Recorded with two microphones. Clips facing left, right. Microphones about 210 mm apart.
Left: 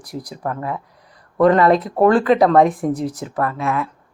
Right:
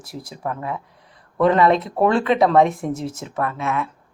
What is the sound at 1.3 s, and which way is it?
Speech, centre (ahead or behind).